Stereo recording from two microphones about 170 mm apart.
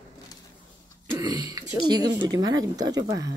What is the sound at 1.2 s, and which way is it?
A woman's voice, 20° right (ahead or behind).